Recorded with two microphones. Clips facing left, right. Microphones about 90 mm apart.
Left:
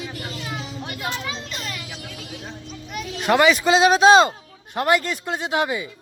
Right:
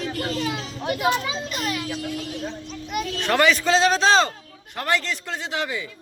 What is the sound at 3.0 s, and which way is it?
A man's voice, 10° left (ahead or behind).